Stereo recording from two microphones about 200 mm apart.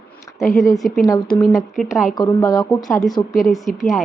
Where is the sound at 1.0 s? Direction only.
15° left (ahead or behind).